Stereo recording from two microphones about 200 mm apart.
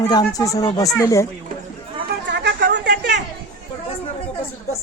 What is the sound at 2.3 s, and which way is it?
Chatter, 60° right (ahead or behind).